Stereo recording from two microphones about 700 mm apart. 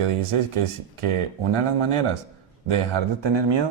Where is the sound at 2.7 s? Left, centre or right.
Right.